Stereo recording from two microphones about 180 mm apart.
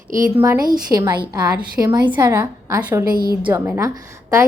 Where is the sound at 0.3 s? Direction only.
15° right (ahead or behind).